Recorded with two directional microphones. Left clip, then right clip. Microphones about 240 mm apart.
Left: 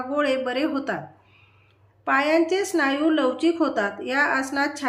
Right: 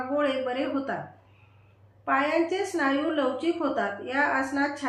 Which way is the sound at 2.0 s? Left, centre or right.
Left.